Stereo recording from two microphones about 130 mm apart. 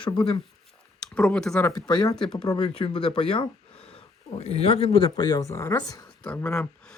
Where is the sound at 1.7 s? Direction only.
35° left (ahead or behind).